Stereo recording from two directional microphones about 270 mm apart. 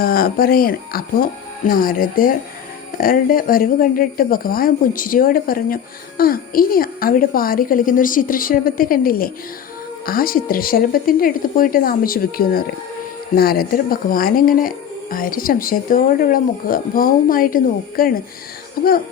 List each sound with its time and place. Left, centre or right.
0.0 s speech: left